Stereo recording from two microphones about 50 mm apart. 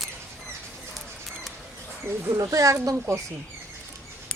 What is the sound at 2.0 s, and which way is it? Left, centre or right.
Speech, right.